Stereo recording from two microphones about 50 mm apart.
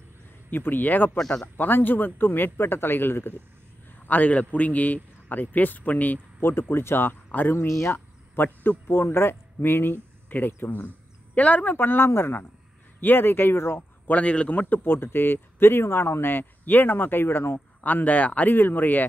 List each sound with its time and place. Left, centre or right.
0.5 s a man's voice: left
1.1 s speech: centre
1.6 s speech: left
4.0 s a man's voice: left
6.4 s speech: left
7.2 s speech: left
7.5 s speech: left
8.6 s speech: left
11.3 s a man's voice: left
11.7 s speech: left
14.0 s a man's voice: left
14.8 s speech: left
17.8 s a man's voice: left
18.5 s a man's voice: left